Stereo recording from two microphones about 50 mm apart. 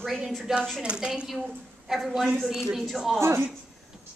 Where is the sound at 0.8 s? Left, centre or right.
Centre.